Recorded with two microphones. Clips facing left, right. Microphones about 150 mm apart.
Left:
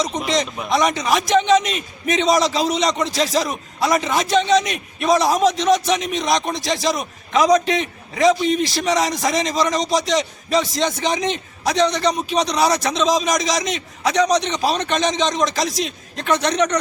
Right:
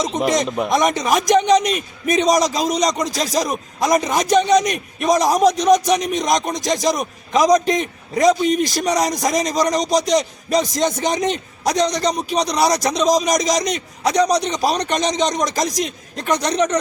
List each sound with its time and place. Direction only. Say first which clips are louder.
0.3 s a man's voice: right 4 dB; 50° right (ahead or behind)